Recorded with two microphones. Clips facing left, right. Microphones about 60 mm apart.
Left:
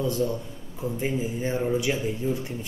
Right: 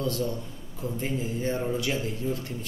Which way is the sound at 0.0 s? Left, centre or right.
Centre.